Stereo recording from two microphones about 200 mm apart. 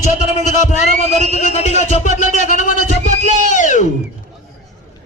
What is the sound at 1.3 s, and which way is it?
Speech, 35° left (ahead or behind).